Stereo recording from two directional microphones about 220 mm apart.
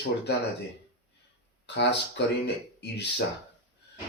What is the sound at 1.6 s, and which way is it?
Speech, 50° left (ahead or behind).